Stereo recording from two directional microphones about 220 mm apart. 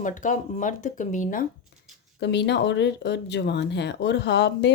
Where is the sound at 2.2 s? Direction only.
50° left (ahead or behind).